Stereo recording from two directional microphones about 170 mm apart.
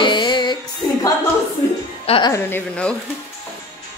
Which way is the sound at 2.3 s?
10° left (ahead or behind).